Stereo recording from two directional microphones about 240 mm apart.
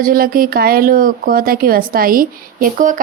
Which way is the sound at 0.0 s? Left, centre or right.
Right.